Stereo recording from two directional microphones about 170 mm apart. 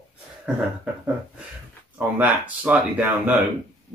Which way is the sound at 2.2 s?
10° right (ahead or behind).